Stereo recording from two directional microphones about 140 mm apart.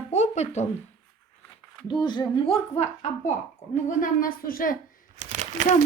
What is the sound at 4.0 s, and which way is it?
Speech, 80° left.